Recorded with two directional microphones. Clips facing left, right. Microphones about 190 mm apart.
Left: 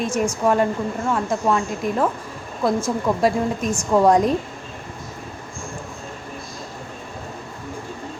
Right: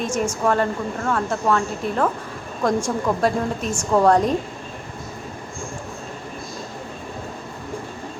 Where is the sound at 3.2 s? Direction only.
10° left (ahead or behind).